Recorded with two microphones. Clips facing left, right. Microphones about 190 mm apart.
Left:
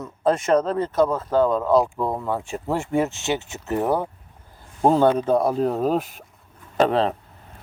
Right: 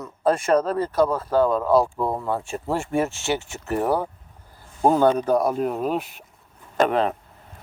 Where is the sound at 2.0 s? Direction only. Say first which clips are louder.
Even; 5° right (ahead or behind).